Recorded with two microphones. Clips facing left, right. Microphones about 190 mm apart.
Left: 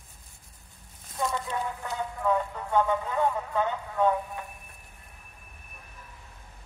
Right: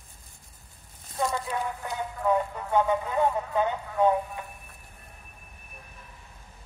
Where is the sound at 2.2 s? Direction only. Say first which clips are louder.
Right 2 dB; 15° right (ahead or behind).